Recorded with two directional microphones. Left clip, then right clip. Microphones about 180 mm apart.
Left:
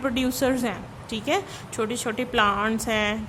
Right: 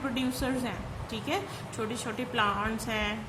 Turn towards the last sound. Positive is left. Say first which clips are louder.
# left 7 dB
turn(degrees=45)  # may be behind; listen again after turning